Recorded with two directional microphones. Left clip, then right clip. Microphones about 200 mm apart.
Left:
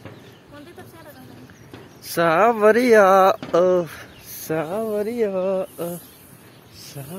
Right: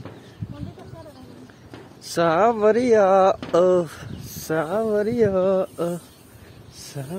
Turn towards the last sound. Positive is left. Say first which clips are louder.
# right 2 dB
turn(degrees=-30)  # may be behind; listen again after turning